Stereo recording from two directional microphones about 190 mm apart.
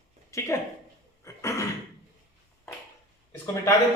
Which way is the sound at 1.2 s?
15° left (ahead or behind).